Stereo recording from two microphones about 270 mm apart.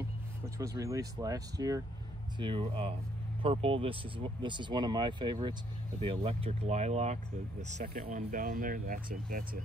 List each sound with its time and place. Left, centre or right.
0.6 s speech: centre; by 9.6 s right